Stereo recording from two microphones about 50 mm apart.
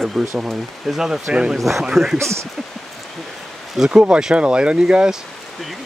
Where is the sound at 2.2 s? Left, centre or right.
Right.